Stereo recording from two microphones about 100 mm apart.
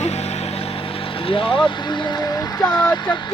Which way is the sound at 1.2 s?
65° left (ahead or behind).